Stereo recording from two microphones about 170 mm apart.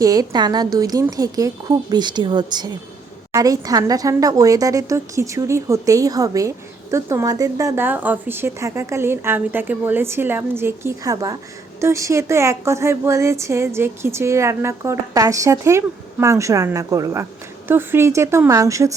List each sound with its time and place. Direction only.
0.0 s speech: 20° right (ahead or behind)